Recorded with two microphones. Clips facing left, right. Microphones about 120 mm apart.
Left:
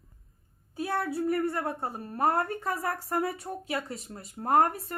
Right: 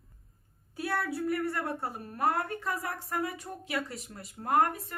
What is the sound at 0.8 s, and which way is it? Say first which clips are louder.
A woman's voice: left 2 dB; 25° left (ahead or behind).